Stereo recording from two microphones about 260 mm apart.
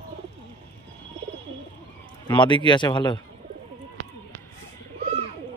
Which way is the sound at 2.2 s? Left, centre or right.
Centre.